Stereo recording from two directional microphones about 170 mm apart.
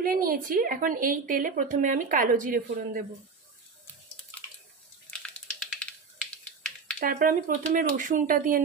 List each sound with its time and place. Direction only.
0.0 s a woman's voice: 60° right (ahead or behind)
5.6 s typing: 5° left (ahead or behind)
7.0 s a woman's voice: 50° right (ahead or behind)